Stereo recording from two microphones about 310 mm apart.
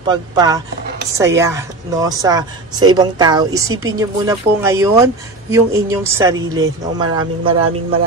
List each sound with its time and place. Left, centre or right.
0.0 s a woman's voice: centre